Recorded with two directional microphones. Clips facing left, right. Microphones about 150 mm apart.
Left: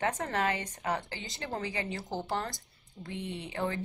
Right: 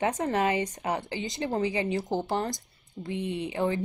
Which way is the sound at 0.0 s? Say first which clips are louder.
Right 5 dB; 15° right (ahead or behind).